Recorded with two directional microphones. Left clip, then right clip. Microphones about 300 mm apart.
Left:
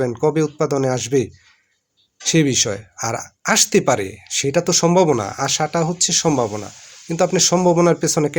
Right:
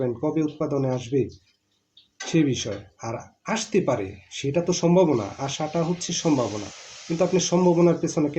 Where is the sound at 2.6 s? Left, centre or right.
Left.